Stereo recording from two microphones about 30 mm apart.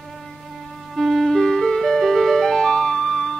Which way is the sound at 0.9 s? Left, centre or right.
Centre.